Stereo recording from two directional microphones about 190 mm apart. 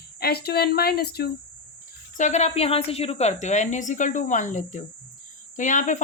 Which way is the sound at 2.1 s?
40° left (ahead or behind).